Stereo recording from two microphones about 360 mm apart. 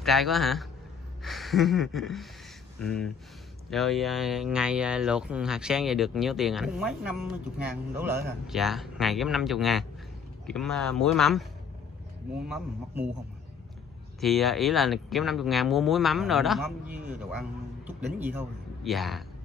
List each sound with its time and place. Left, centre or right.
0.0 s speech: centre
12.4 s speech: centre
14.2 s a man's voice: centre